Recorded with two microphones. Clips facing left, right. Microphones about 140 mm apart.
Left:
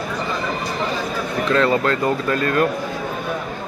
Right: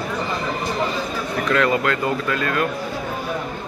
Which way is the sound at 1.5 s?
30° left (ahead or behind).